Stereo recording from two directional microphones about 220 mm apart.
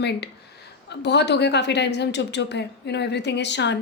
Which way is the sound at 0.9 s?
50° left (ahead or behind).